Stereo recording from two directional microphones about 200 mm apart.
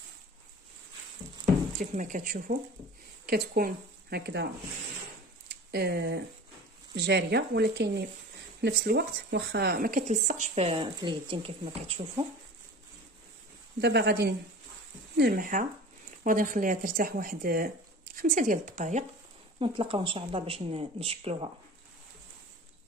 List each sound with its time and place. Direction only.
1.8 s speech: 40° right (ahead or behind)
5.5 s speech: 55° right (ahead or behind); by 11.7 s 25° right (ahead or behind)
13.7 s speech: 55° right (ahead or behind); by 19.0 s 40° right (ahead or behind)
19.6 s speech: 25° right (ahead or behind)